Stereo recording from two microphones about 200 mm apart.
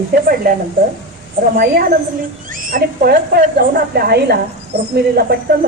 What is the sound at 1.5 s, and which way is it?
Speech, 50° right (ahead or behind).